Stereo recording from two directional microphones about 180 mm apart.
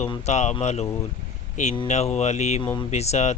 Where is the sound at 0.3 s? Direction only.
40° left (ahead or behind).